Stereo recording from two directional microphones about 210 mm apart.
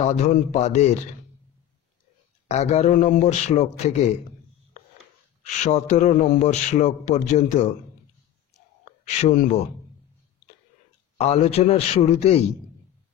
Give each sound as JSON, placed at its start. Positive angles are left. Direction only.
{"t": 0.0, "sound": "a man's voice", "side_deg": 35}
{"t": 2.4, "sound": "a man's voice", "side_deg": 30}
{"t": 5.4, "sound": "a man's voice", "side_deg": 35}
{"t": 9.0, "sound": "a man's voice", "side_deg": 30}
{"t": 11.1, "sound": "a man's voice", "side_deg": 30}